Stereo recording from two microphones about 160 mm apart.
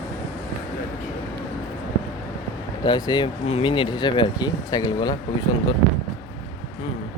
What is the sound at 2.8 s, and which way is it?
Speech, 25° left (ahead or behind).